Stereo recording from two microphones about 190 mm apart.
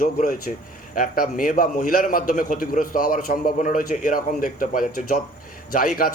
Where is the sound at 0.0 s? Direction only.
45° left (ahead or behind).